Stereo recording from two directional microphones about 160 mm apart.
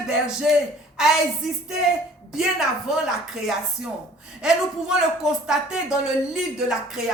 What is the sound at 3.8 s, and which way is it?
Speech, 90° right.